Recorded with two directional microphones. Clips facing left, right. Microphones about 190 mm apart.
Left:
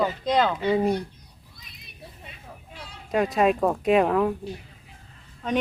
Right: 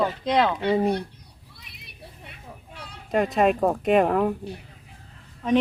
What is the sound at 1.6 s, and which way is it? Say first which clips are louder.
Children playing: right 1 dB; 65° right (ahead or behind).